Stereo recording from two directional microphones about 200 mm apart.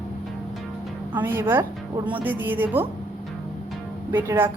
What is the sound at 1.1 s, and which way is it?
A woman's voice, 10° right (ahead or behind).